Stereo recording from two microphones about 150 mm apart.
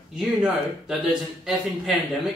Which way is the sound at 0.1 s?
5° right (ahead or behind).